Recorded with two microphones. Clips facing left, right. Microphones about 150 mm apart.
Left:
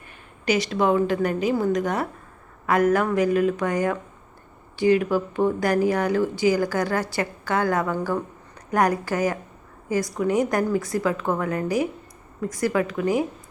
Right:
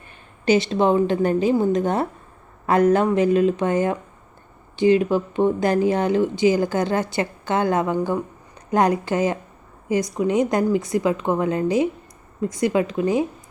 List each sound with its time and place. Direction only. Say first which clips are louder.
0.4 s speech: right 4 dB; 25° right (ahead or behind)